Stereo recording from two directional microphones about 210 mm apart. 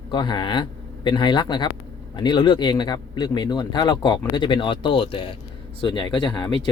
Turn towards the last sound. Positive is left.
turn(degrees=20)  # may be behind; listen again after turning